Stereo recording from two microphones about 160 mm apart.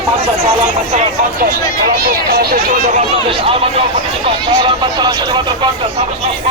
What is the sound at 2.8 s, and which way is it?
Speech, 45° right (ahead or behind).